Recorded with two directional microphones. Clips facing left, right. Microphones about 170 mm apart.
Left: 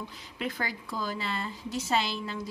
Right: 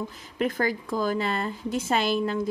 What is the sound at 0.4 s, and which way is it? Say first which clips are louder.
A woman's voice: right 8 dB; 50° right (ahead or behind).